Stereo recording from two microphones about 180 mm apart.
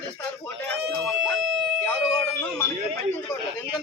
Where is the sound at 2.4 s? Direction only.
15° left (ahead or behind).